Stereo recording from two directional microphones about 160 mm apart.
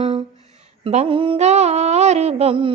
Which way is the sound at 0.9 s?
35° right (ahead or behind).